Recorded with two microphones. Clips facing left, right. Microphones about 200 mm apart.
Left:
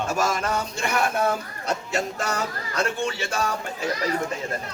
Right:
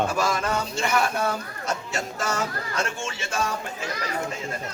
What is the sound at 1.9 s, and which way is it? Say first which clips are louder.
A man's voice: left 2 dB; 35° left (ahead or behind).